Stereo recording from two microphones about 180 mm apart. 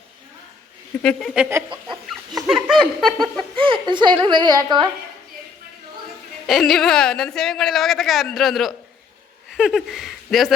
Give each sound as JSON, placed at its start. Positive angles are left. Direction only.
{"t": 1.0, "sound": "a woman's voice", "side_deg": 0}
{"t": 3.6, "sound": "a woman's voice", "side_deg": -25}
{"t": 6.5, "sound": "a woman's voice", "side_deg": 0}